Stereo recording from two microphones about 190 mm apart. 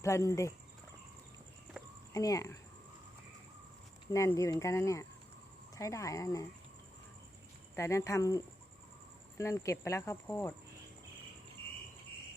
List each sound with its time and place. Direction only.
0.0 s speech: 15° left (ahead or behind)
1.7 s a sound: 5° right (ahead or behind)
2.1 s speech: 20° left (ahead or behind)
4.1 s speech: 15° left (ahead or behind)
7.8 s speech: 15° left (ahead or behind)